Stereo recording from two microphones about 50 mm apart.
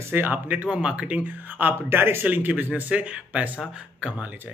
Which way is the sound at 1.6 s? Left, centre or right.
Right.